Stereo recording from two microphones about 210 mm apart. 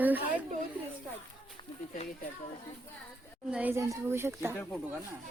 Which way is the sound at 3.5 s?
10° right (ahead or behind).